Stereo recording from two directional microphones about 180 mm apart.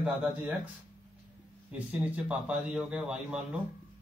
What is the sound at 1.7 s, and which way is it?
Speech, 5° right (ahead or behind).